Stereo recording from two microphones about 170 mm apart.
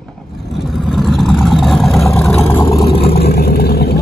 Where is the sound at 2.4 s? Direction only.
15° left (ahead or behind).